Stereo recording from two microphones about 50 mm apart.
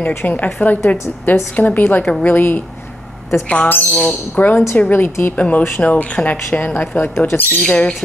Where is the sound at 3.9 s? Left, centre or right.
Centre.